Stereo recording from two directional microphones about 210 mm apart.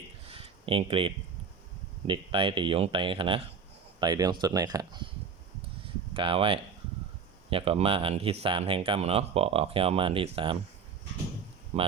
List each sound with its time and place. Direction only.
0.3 s a sound: 25° right (ahead or behind)
2.0 s speech: 25° right (ahead or behind)
6.1 s speech: 25° right (ahead or behind)
11.7 s speech: 30° right (ahead or behind)